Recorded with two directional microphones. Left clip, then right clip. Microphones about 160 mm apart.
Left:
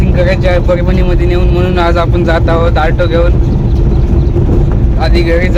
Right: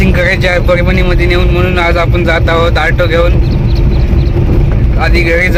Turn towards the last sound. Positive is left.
turn(degrees=0)  # may be behind; listen again after turning